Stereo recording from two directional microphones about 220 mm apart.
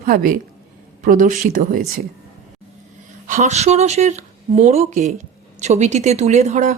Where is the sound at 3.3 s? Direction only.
30° right (ahead or behind).